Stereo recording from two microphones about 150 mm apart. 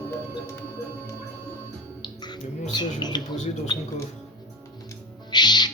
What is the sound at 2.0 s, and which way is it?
Music, 30° left (ahead or behind).